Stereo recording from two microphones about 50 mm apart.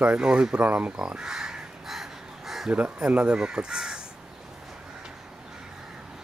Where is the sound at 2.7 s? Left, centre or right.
Right.